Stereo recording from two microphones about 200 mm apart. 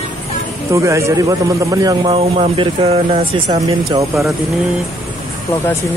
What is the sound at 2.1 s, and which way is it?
Speech, 30° right (ahead or behind).